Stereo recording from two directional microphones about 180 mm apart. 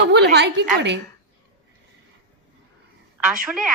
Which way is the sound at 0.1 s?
70° right (ahead or behind).